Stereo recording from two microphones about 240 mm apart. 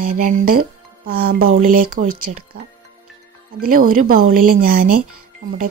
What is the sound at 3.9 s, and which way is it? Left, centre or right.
A woman's voice, right.